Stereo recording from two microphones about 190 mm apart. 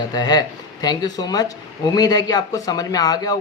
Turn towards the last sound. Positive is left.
turn(degrees=20)  # may be behind; listen again after turning